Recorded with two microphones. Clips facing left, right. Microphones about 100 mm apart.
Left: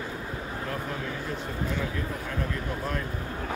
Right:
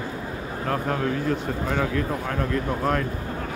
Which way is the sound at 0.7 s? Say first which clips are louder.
Right 11 dB; 60° right (ahead or behind).